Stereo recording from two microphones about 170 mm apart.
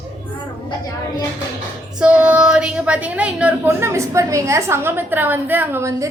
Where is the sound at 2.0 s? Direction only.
5° right (ahead or behind).